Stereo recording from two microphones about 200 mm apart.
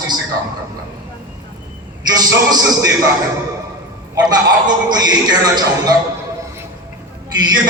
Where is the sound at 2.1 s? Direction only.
20° right (ahead or behind).